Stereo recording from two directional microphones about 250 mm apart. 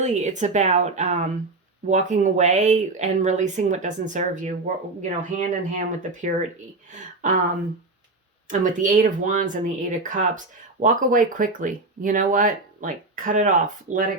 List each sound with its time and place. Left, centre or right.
0.0 s speech: right
8.4 s speech: right